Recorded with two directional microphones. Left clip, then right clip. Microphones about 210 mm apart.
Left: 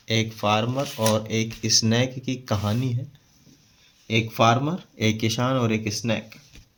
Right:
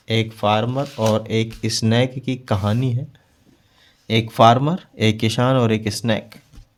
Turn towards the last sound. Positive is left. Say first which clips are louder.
# right 5 dB
turn(degrees=-55)  # may be behind; listen again after turning